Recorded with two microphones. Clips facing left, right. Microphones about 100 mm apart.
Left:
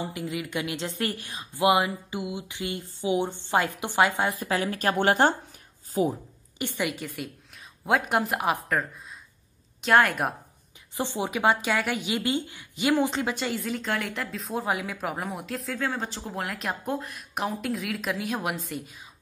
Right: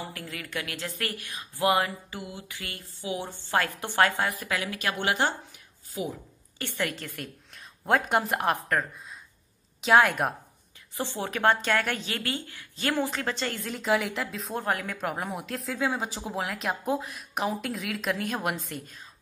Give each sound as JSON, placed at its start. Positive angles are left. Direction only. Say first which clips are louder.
{"t": 0.0, "sound": "a woman's voice", "louder": "left 6 dB", "side_deg": 20}
{"t": 4.3, "sound": "speech", "louder": "left 4 dB", "side_deg": 30}
{"t": 6.6, "sound": "a woman's voice", "louder": "left 2 dB", "side_deg": 15}
{"t": 11.0, "sound": "speech", "louder": "left 2 dB", "side_deg": 15}